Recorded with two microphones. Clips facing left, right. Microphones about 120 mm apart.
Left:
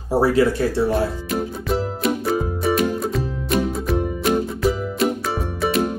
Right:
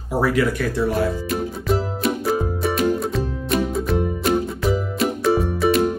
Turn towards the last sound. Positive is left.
turn(degrees=0)  # may be behind; listen again after turning